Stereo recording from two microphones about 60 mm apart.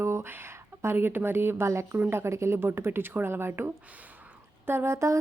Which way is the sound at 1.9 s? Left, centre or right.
Right.